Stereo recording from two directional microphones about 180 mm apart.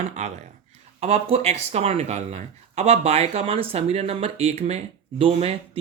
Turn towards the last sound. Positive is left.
turn(degrees=-30)  # may be behind; listen again after turning